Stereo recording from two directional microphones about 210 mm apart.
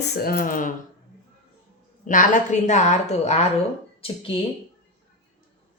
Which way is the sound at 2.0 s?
40° left (ahead or behind).